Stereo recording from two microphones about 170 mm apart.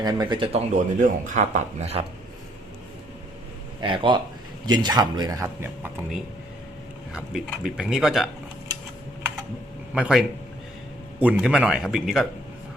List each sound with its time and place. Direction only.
0.0 s speech: 25° right (ahead or behind)
0.7 s speech: 50° right (ahead or behind)
3.8 s speech: 30° right (ahead or behind)
7.1 s speech: 5° right (ahead or behind)
9.9 s speech: 5° right (ahead or behind)